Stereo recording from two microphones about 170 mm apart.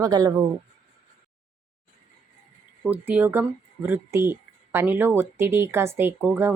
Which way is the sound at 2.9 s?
10° right (ahead or behind).